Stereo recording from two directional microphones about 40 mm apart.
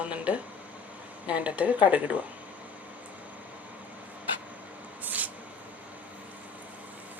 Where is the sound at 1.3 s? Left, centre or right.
Right.